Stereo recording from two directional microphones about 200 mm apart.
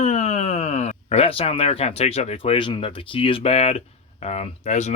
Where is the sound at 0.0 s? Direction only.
35° left (ahead or behind).